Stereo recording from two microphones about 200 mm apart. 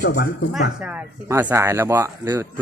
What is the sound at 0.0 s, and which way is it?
Speech, 55° left (ahead or behind).